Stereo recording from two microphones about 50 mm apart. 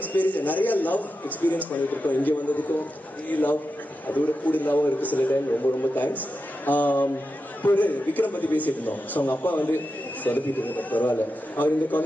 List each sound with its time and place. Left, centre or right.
0.0 s a man's voice: left